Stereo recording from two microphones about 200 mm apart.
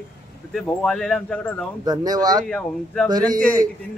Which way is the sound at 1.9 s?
20° right (ahead or behind).